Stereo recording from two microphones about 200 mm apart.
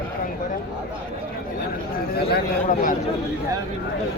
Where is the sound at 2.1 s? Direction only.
50° left (ahead or behind).